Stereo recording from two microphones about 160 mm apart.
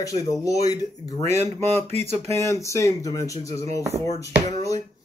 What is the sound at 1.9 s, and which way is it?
Speech, 40° right (ahead or behind).